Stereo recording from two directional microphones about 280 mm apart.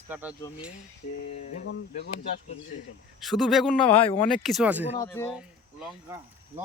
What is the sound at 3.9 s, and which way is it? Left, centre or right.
Speech, centre.